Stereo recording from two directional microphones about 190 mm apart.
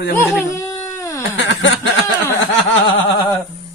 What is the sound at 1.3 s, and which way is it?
Snicker, 70° left (ahead or behind).